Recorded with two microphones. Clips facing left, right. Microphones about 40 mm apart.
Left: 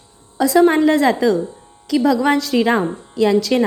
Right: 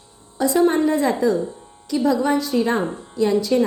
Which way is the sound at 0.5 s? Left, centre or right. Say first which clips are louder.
Left 5 dB; left.